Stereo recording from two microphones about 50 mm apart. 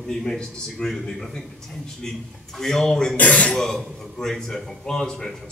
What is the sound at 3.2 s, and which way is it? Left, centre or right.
Speech, left.